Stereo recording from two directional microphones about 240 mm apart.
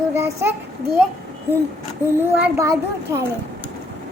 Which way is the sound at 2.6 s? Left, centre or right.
Centre.